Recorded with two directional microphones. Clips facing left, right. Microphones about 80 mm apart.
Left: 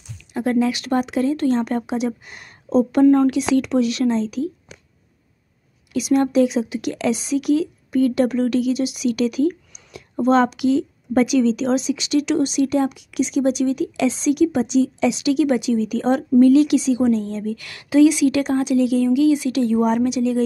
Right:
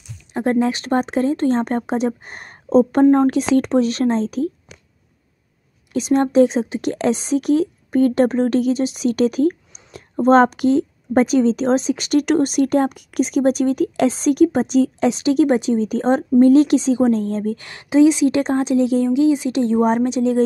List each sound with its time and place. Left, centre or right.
0.3 s a woman's voice: right
5.9 s a woman's voice: right